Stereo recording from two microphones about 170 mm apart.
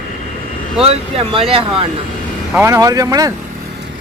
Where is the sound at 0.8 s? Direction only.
35° right (ahead or behind).